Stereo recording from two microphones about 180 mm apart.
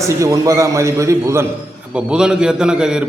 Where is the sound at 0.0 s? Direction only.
15° right (ahead or behind).